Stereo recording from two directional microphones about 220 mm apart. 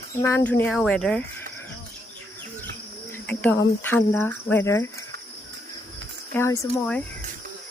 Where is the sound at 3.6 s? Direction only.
10° left (ahead or behind).